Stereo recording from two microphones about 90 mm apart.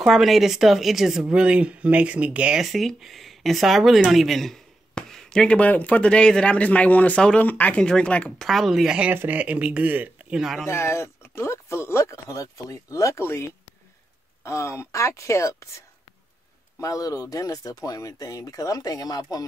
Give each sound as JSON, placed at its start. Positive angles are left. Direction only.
{"t": 0.0, "sound": "speech", "side_deg": 0}
{"t": 8.5, "sound": "speech", "side_deg": 0}
{"t": 9.1, "sound": "speech", "side_deg": -20}
{"t": 10.3, "sound": "speech", "side_deg": 0}
{"t": 10.7, "sound": "speech", "side_deg": 30}
{"t": 16.8, "sound": "speech", "side_deg": 40}